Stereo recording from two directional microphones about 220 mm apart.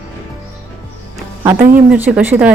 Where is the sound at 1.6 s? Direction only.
40° right (ahead or behind).